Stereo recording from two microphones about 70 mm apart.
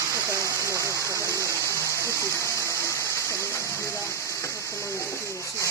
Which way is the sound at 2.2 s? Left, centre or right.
Left.